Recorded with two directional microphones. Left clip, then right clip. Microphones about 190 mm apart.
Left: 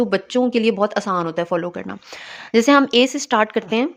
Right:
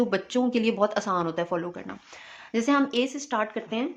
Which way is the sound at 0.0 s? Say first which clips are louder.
Left 7 dB; 35° left (ahead or behind).